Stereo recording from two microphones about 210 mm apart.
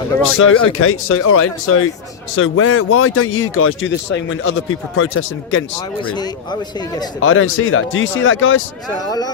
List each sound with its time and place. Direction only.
0.3 s speech: 85° left
2.3 s speech: 75° left (ahead or behind)
6.1 s a man's voice: 20° left (ahead or behind)
7.2 s speech: 75° left (ahead or behind)
9.0 s a man's voice: 20° left (ahead or behind)